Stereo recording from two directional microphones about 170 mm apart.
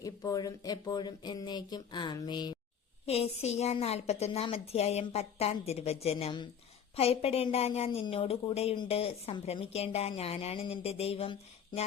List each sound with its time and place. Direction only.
0.0 s speech: 20° left (ahead or behind)
3.1 s a woman's voice: 40° left (ahead or behind)